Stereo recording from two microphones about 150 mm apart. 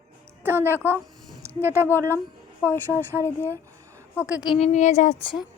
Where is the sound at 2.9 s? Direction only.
15° right (ahead or behind).